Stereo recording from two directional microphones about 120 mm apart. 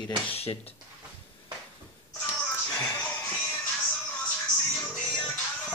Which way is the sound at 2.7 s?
10° left (ahead or behind).